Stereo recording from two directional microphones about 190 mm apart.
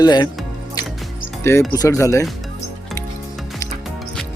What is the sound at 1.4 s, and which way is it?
Speech, 15° left (ahead or behind).